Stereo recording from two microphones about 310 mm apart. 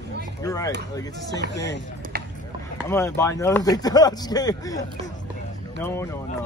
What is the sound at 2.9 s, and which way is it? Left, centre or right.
Speech, centre.